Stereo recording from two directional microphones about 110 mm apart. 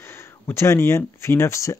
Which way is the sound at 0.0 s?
25° left (ahead or behind).